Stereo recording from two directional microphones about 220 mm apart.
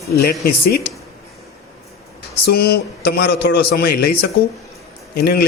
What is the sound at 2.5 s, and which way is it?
A man's voice, 45° left (ahead or behind).